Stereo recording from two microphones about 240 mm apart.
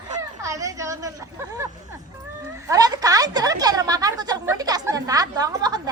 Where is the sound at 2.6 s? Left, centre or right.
Centre.